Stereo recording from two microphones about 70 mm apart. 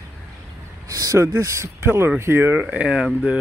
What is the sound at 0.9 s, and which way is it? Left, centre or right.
Speech, right.